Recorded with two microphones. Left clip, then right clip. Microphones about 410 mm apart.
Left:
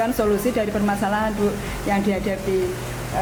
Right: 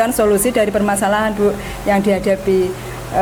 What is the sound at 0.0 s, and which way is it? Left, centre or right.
Speech, right.